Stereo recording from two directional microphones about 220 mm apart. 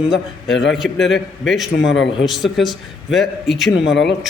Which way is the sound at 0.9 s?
55° left (ahead or behind).